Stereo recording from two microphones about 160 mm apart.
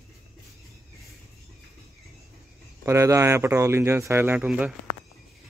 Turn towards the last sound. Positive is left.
turn(degrees=-5)  # may be behind; listen again after turning